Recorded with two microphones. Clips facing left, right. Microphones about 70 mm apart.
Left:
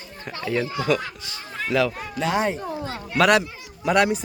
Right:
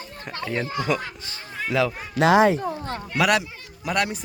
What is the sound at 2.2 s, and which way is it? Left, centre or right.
Speech, right.